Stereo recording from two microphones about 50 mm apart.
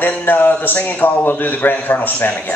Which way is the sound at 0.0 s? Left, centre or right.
Left.